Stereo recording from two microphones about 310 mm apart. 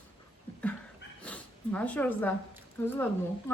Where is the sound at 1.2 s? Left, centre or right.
Centre.